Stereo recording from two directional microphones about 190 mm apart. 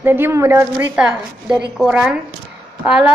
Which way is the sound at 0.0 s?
10° right (ahead or behind).